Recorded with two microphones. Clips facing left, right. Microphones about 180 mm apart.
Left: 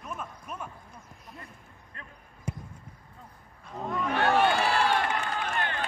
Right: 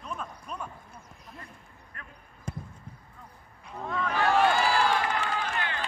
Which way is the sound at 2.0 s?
25° left (ahead or behind).